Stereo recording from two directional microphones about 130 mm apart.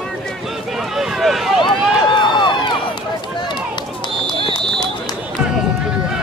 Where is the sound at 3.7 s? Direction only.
35° left (ahead or behind).